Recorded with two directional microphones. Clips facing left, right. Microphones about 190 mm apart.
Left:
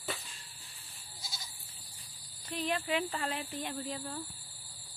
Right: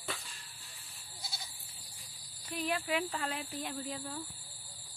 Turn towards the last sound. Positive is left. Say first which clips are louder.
# left 1 dB
turn(degrees=0)  # may be behind; listen again after turning